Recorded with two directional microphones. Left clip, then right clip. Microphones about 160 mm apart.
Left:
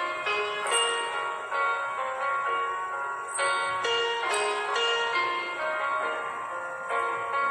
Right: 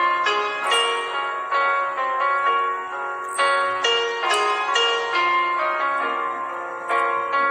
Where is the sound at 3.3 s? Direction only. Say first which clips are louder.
Right 8 dB; 50° right (ahead or behind).